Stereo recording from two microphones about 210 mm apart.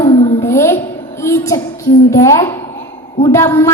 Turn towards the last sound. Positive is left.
turn(degrees=15)  # may be behind; listen again after turning